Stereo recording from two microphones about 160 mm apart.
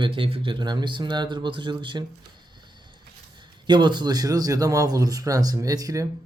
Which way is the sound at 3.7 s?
30° right (ahead or behind).